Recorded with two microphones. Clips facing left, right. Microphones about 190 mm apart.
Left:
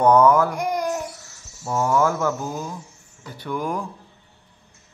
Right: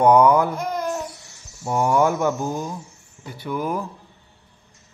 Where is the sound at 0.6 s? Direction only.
15° left (ahead or behind).